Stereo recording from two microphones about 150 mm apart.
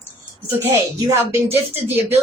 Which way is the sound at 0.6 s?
15° right (ahead or behind).